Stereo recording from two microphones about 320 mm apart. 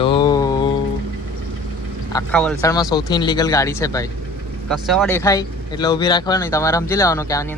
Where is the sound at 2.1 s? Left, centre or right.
Centre.